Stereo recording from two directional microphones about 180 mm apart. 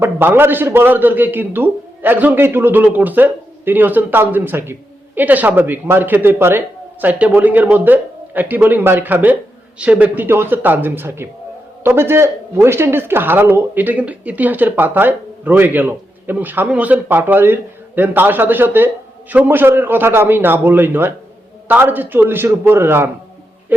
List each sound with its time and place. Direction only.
0.0 s speech: 10° right (ahead or behind)